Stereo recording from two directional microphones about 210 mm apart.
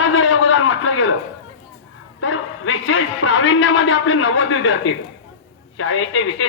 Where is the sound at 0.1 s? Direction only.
70° left (ahead or behind).